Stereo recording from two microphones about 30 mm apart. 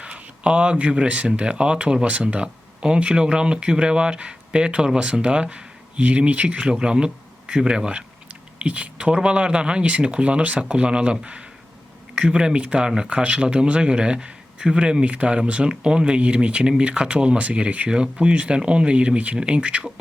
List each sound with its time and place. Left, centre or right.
0.0 s speech: right
6.0 s speech: right
6.7 s speech: right
7.9 s a sound: right
8.6 s speech: right
15.0 s speech: right
17.8 s speech: right
19.4 s speech: right